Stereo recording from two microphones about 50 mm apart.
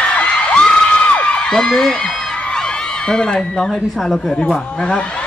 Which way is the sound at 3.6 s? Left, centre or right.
Centre.